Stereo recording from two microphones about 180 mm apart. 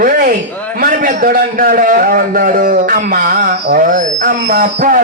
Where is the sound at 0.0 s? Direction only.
50° right (ahead or behind).